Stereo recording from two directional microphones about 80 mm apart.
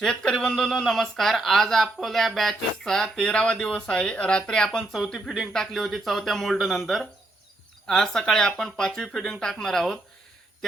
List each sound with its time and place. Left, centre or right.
0.0 s speech: centre